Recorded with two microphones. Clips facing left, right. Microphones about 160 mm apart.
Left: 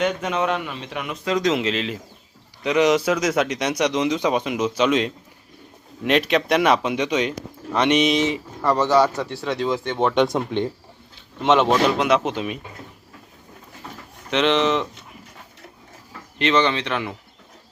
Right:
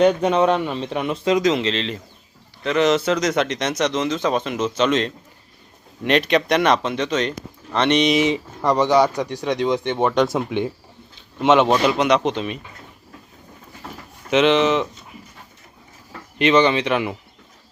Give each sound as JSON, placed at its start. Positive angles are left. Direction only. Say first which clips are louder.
{"t": 0.0, "sound": "speech", "louder": "right 7 dB", "side_deg": -35}
{"t": 1.4, "sound": "speech", "louder": "right 2 dB", "side_deg": 0}
{"t": 8.3, "sound": "speech", "louder": "right 2 dB", "side_deg": -15}
{"t": 10.2, "sound": "speech", "louder": "even", "side_deg": 0}
{"t": 14.3, "sound": "speech", "louder": "right 3 dB", "side_deg": -5}
{"t": 16.4, "sound": "speech", "louder": "right 4 dB", "side_deg": -10}